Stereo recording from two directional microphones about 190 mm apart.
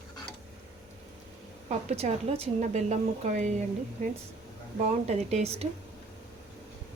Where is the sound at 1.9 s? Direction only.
35° right (ahead or behind).